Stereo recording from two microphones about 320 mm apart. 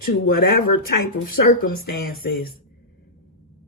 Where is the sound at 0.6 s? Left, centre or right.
Left.